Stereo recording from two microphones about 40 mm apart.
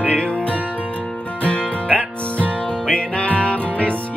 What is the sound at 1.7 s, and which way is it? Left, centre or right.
Music, left.